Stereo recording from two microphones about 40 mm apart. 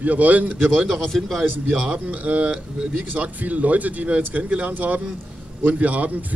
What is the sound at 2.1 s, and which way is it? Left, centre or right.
A man's voice, right.